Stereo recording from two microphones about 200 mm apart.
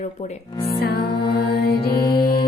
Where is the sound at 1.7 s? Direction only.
20° left (ahead or behind).